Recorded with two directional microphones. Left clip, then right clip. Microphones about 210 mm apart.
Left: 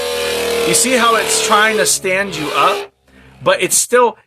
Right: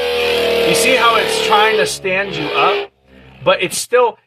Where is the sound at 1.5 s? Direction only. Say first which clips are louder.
Even; 35° left (ahead or behind).